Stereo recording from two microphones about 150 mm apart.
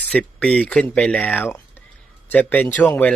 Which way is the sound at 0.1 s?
5° left (ahead or behind).